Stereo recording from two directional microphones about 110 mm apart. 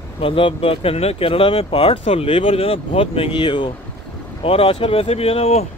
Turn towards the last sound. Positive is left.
turn(degrees=65)  # may be behind; listen again after turning